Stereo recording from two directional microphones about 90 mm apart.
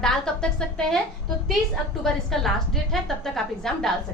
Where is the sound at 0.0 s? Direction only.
10° left (ahead or behind).